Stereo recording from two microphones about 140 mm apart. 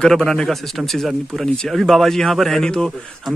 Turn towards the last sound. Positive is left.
turn(degrees=5)  # may be behind; listen again after turning